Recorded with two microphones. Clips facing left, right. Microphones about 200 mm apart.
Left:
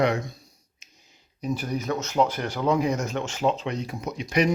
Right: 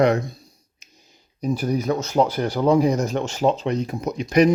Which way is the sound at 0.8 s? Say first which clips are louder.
Right 5 dB; 40° right (ahead or behind).